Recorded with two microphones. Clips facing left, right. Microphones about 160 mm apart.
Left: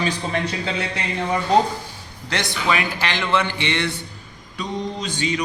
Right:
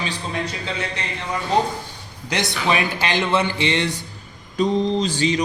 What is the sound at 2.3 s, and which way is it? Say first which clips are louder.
Speech: right 1 dB; 20° right (ahead or behind).